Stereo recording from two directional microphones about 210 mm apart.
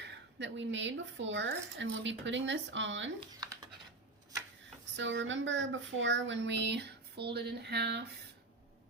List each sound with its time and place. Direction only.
0.3 s speech: 60° right (ahead or behind)
4.9 s speech: 60° right (ahead or behind)